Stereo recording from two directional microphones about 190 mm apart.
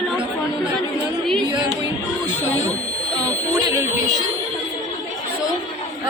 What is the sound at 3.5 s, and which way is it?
Speech, 20° right (ahead or behind).